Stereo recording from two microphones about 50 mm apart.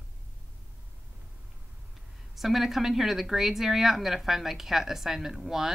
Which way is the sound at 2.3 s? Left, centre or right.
Centre.